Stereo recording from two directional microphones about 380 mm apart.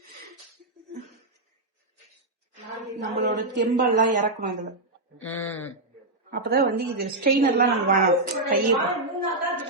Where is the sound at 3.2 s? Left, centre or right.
Right.